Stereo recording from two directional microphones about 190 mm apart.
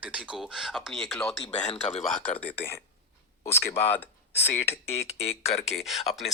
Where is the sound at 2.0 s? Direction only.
5° left (ahead or behind).